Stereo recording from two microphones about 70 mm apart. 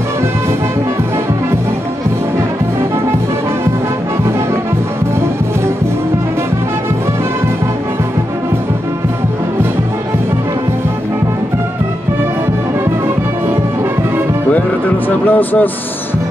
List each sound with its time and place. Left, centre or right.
15.0 s speech: left